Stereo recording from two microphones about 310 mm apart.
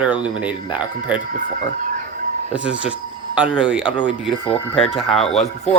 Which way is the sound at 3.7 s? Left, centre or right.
Centre.